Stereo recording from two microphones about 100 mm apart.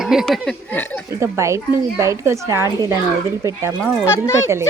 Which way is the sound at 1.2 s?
30° right (ahead or behind).